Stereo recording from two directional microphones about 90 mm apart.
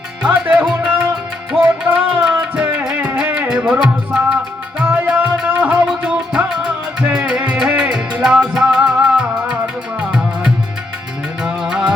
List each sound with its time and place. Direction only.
0.3 s music: 20° right (ahead or behind)